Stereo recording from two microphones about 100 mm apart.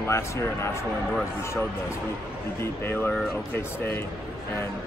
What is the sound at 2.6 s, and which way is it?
A man's voice, 20° left (ahead or behind).